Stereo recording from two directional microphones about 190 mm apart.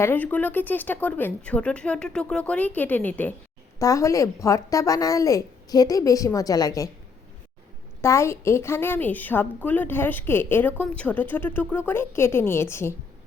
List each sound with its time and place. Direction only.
0.0 s a woman's voice: 10° left (ahead or behind)
8.0 s a woman's voice: 15° left (ahead or behind)